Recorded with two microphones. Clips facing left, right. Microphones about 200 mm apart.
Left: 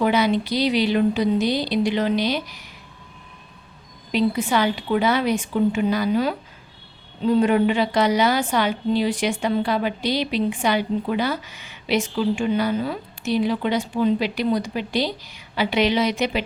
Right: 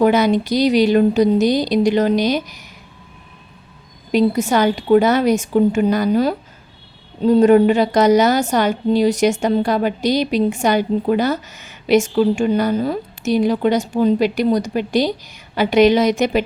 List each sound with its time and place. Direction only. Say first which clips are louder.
0.0 s a woman's voice: right 5 dB; 45° right (ahead or behind)
4.1 s a woman's voice: right 5 dB; 45° right (ahead or behind)